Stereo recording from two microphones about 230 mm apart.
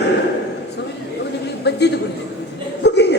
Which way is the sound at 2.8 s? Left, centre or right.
Left.